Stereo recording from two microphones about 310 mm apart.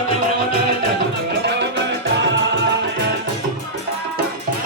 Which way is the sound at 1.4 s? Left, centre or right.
Right.